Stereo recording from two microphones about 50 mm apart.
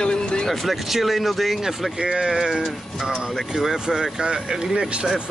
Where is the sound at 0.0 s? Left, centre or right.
Centre.